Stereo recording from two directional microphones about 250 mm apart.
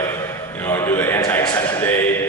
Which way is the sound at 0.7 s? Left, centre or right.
Centre.